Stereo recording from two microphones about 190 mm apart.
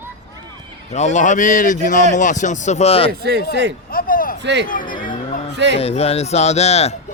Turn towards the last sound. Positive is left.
turn(degrees=35)  # may be behind; listen again after turning